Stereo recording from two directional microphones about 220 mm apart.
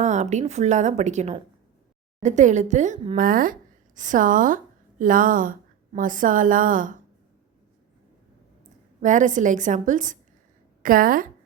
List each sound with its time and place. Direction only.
0.0 s a woman's voice: 30° right (ahead or behind)
9.0 s a woman's voice: 35° right (ahead or behind)